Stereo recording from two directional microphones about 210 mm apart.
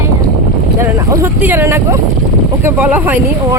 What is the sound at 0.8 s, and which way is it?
Speech, 10° right (ahead or behind).